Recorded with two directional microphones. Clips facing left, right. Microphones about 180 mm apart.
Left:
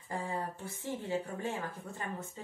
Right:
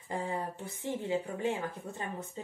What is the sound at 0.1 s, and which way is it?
Speech, 20° right (ahead or behind).